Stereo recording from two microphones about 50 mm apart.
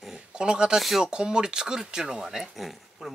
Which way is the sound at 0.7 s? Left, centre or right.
Centre.